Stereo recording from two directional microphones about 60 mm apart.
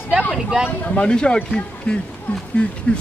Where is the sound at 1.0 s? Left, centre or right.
Centre.